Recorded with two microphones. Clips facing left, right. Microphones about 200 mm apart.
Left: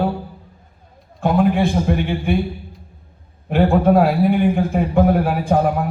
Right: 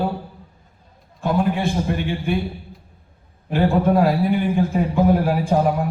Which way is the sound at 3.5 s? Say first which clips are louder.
Left 3 dB; 60° left (ahead or behind).